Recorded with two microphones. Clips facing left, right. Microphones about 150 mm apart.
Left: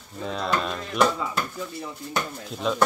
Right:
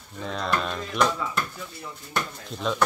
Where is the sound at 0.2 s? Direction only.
Centre (ahead or behind).